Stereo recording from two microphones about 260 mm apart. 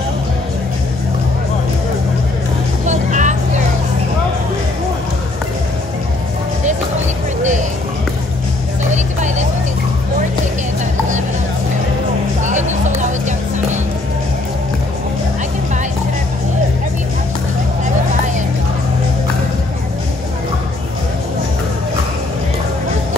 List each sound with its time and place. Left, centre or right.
2.9 s vehicle: right
8.9 s vehicle: right
12.4 s music: right